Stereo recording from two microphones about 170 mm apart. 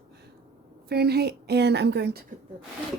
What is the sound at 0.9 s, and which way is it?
A woman's voice, 70° right (ahead or behind).